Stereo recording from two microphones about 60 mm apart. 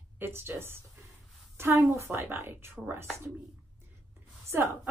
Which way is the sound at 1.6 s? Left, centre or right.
Right.